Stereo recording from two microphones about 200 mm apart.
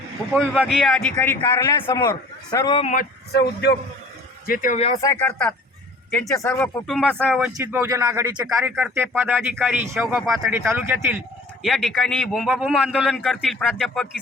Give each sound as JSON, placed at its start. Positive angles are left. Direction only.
{"t": 0.3, "sound": "a man's voice", "side_deg": -5}
{"t": 2.8, "sound": "speech", "side_deg": 40}
{"t": 3.3, "sound": "a man's voice", "side_deg": 55}
{"t": 4.4, "sound": "speech", "side_deg": 45}
{"t": 4.8, "sound": "speech", "side_deg": 30}
{"t": 5.0, "sound": "a man's voice", "side_deg": 5}
{"t": 6.8, "sound": "a man's voice", "side_deg": 0}